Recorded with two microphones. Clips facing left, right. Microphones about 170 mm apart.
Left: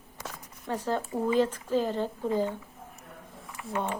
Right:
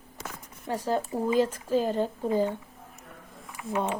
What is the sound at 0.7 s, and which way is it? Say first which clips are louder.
Speech: right 2 dB; 10° right (ahead or behind).